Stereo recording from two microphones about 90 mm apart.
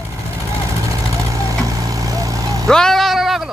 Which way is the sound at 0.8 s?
40° right (ahead or behind).